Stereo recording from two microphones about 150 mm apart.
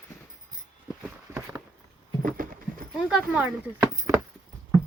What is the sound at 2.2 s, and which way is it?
Clip-clop, 65° right (ahead or behind).